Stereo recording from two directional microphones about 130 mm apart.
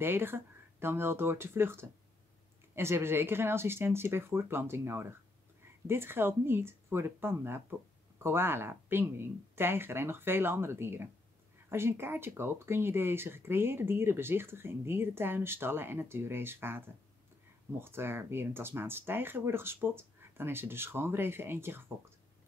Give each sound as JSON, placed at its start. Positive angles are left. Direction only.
{"t": 0.0, "sound": "speech", "side_deg": -15}